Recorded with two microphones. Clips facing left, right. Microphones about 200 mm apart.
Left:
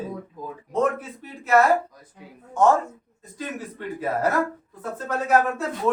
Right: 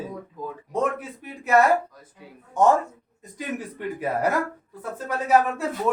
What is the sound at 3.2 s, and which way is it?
A man's voice, 15° right (ahead or behind).